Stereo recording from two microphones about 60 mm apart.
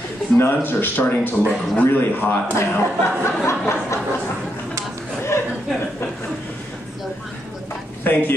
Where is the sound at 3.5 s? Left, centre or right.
Left.